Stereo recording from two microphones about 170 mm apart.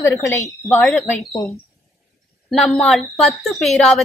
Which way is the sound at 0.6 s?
15° left (ahead or behind).